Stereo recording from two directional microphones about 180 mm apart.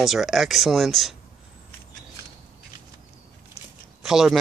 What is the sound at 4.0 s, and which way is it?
Speech, centre (ahead or behind).